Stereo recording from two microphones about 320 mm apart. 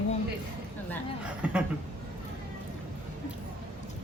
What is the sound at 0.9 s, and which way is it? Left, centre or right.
Speech, centre.